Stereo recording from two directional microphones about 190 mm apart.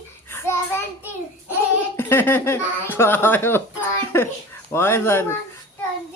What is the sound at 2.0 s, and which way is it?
Speech, 10° left (ahead or behind).